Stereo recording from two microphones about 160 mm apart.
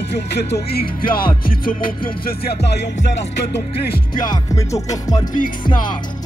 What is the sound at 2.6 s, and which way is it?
Speech, 90° left.